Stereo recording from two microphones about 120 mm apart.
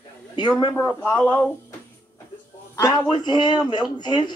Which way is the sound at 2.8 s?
35° left (ahead or behind).